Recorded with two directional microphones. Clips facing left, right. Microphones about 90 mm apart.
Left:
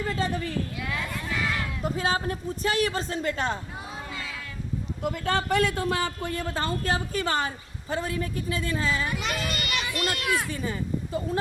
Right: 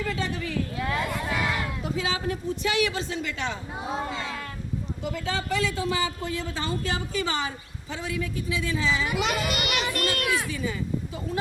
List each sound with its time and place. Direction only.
0.2 s a sound: 40° left (ahead or behind)
1.8 s a man's voice: 45° left (ahead or behind)
3.9 s a sound: 25° right (ahead or behind)
5.0 s a man's voice: 55° left (ahead or behind)
9.1 s a child's voice: 90° right
9.9 s children playing: 55° right (ahead or behind)
10.2 s speech: centre (ahead or behind)
10.5 s a man's voice: 45° left (ahead or behind)